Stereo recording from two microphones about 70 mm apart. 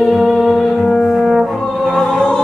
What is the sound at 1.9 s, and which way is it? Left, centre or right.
Music, centre.